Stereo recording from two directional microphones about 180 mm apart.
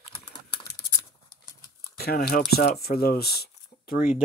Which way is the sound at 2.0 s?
55° left (ahead or behind).